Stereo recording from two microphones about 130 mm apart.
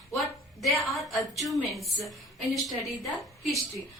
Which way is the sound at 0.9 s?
Centre (ahead or behind).